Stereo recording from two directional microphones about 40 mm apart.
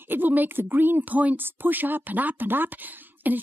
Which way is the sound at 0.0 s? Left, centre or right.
Right.